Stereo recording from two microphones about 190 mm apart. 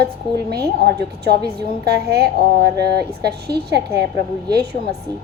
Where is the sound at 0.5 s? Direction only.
60° right (ahead or behind).